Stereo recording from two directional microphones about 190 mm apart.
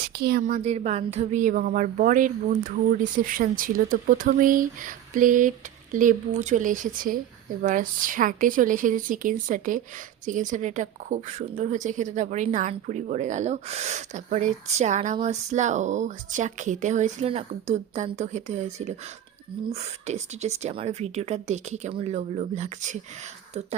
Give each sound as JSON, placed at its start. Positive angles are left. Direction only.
{"t": 0.1, "sound": "a woman's voice", "side_deg": -55}